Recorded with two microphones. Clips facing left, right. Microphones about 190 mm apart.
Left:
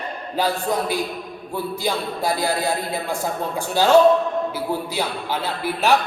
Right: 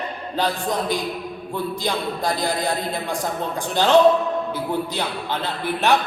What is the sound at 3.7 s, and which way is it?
A man's voice, 10° left (ahead or behind).